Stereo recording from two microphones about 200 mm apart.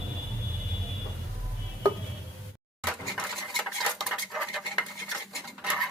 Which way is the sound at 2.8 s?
5° right (ahead or behind).